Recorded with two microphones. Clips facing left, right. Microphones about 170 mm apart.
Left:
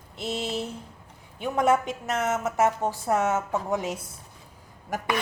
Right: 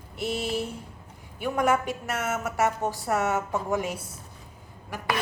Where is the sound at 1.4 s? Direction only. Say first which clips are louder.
Left 2 dB; 25° left (ahead or behind).